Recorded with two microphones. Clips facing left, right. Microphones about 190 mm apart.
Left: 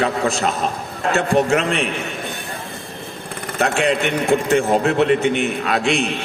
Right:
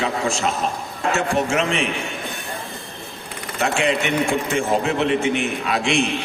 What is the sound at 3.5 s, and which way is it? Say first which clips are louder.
Speech: left 2 dB; 60° left (ahead or behind).